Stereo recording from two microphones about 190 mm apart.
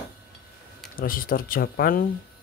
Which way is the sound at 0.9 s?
50° left (ahead or behind).